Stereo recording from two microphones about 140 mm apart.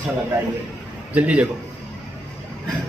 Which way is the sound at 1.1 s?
10° right (ahead or behind).